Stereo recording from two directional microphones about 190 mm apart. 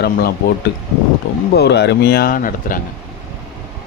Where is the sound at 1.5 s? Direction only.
60° left (ahead or behind).